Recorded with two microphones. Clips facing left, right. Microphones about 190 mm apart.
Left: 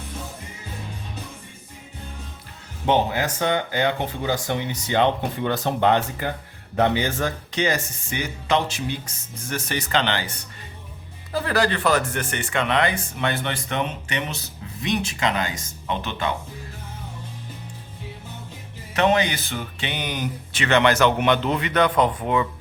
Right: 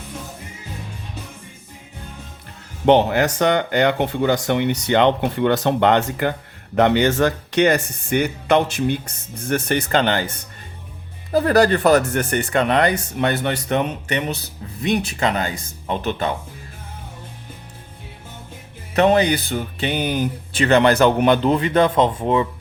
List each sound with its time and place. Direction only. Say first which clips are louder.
2.8 s speech: right 6 dB; 65° right (ahead or behind); by 16.3 s 45° right (ahead or behind)
18.9 s speech: right 5 dB; 35° right (ahead or behind)